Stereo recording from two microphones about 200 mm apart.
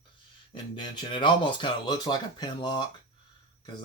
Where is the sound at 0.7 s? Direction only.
25° left (ahead or behind).